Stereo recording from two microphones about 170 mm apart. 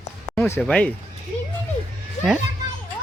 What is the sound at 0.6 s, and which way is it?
Speech, 5° left (ahead or behind).